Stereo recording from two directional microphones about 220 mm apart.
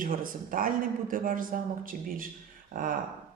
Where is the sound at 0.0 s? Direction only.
40° right (ahead or behind).